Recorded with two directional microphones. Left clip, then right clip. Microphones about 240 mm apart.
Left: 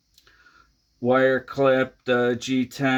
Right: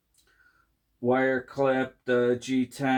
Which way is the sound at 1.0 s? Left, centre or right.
Left.